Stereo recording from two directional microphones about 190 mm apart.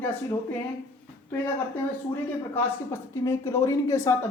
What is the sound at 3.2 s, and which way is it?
Speech, 15° left (ahead or behind).